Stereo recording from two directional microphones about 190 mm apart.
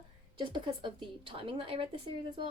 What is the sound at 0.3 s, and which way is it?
A woman's voice, 25° right (ahead or behind).